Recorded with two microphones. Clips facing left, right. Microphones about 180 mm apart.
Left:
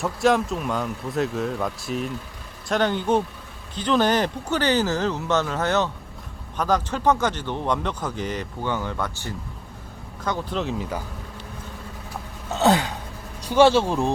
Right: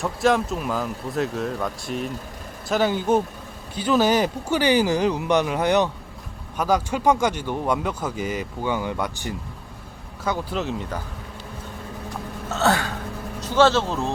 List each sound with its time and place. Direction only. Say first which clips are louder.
0.0 s a man's voice: even; centre (ahead or behind)
12.5 s a sound: left 2 dB; 15° left (ahead or behind)
13.4 s speech: left 2 dB; 15° left (ahead or behind)